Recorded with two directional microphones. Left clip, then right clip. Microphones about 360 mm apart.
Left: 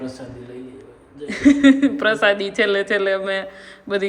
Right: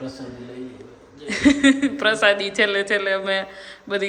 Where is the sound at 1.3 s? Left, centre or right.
Centre.